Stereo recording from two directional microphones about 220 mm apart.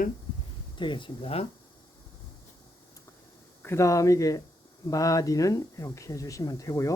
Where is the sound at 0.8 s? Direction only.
20° left (ahead or behind).